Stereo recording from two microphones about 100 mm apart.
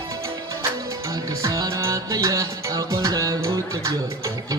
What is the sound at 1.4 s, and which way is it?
Music, 35° right (ahead or behind).